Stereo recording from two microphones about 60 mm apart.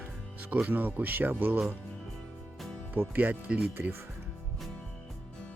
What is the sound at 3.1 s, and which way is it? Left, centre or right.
Speech, right.